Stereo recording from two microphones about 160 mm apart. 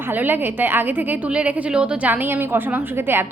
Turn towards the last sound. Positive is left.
turn(degrees=-15)  # may be behind; listen again after turning